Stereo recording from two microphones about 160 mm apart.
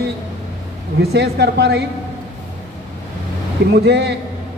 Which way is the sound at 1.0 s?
90° right.